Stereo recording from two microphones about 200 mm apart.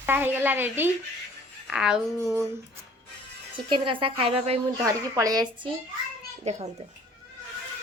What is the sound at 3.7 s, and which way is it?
Speech, 25° right (ahead or behind).